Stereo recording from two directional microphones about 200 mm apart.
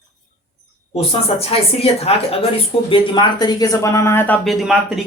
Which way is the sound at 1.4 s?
30° left (ahead or behind).